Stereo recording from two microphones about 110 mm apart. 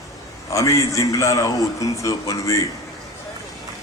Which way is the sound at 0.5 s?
30° left (ahead or behind).